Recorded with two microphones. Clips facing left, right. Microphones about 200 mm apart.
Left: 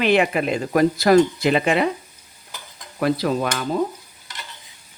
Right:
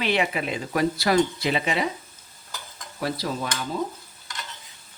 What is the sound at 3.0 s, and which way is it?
Stir, 65° left (ahead or behind).